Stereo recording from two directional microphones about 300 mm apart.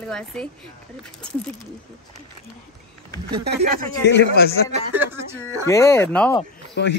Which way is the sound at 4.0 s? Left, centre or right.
Left.